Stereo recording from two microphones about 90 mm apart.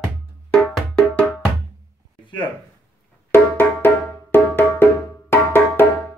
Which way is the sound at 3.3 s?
25° left (ahead or behind).